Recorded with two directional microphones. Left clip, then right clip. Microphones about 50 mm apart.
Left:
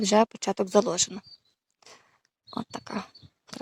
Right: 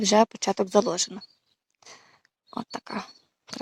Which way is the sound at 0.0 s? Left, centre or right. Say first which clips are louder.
Right 2 dB; centre.